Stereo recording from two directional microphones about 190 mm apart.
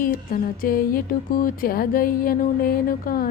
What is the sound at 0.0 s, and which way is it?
Speech, 45° left (ahead or behind).